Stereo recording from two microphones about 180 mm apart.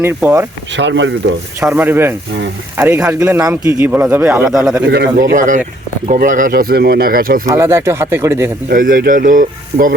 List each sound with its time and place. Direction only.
0.0 s a man's voice: 15° right (ahead or behind)
0.8 s speech: 90° right
1.6 s a man's voice: 10° right (ahead or behind)
4.9 s speech: 60° right (ahead or behind)
5.3 s speech: 45° right (ahead or behind)
7.4 s a man's voice: 15° right (ahead or behind)
8.7 s speech: 50° right (ahead or behind)